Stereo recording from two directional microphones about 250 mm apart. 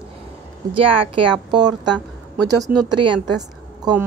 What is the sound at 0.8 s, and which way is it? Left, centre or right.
Speech, right.